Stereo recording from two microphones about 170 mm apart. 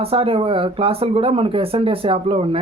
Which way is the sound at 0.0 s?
35° right (ahead or behind).